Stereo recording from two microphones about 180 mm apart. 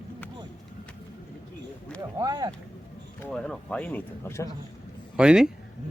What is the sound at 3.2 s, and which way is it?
Speech, 5° left (ahead or behind).